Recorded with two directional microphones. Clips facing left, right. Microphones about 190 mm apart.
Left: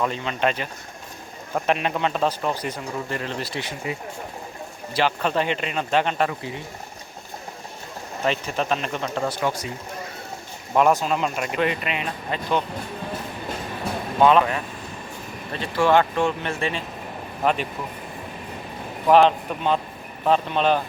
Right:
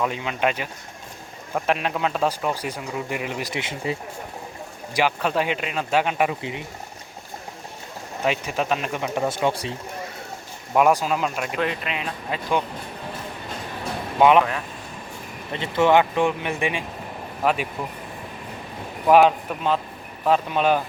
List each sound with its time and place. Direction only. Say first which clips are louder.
0.0 s speech: even; 10° right (ahead or behind)
4.9 s speech: even; 10° right (ahead or behind)
8.2 s speech: even; 5° right (ahead or behind); by 9.7 s 25° right (ahead or behind)
10.8 s speech: even; 5° right (ahead or behind)
14.2 s speech: right 1 dB; 15° right (ahead or behind)
15.5 s speech: right 1 dB; 20° right (ahead or behind); by 17.7 s 5° right (ahead or behind)
19.0 s speech: even; 5° right (ahead or behind)